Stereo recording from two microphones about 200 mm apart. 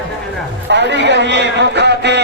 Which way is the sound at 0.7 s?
60° right (ahead or behind).